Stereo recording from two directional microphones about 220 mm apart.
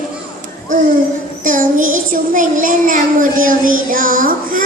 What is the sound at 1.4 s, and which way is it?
Child singing, 35° right (ahead or behind).